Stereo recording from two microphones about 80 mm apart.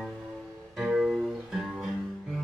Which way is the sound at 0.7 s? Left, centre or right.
Centre.